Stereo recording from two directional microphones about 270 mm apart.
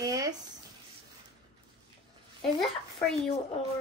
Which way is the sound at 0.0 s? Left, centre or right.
Centre.